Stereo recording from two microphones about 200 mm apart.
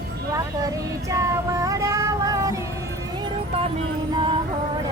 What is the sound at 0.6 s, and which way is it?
Child singing, 15° right (ahead or behind).